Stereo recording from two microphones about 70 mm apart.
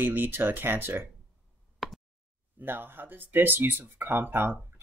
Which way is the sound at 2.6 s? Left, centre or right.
Right.